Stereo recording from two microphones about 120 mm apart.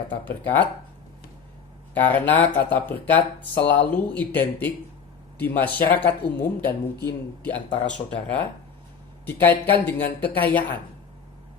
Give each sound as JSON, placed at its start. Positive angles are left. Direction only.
{"t": 0.1, "sound": "speech", "side_deg": 15}
{"t": 1.9, "sound": "speech", "side_deg": 15}